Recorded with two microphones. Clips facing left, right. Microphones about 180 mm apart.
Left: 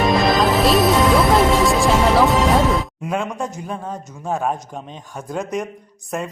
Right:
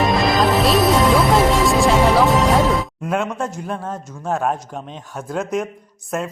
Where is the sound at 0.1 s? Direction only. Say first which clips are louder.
Even; centre (ahead or behind).